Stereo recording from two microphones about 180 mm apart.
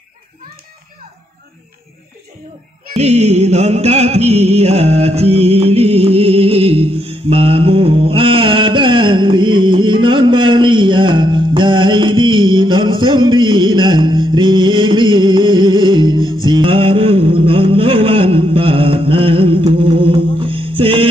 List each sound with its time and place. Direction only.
2.9 s music: 40° right (ahead or behind)